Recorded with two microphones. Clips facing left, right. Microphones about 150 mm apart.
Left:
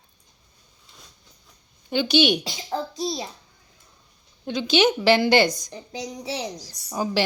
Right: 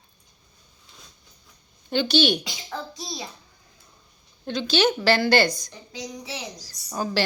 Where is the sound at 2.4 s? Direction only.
30° left (ahead or behind).